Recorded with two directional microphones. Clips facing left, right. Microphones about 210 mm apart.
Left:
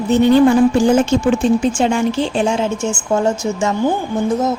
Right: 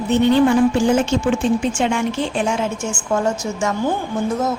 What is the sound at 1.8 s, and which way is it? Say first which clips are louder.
A woman's voice: left 4 dB; 35° left (ahead or behind).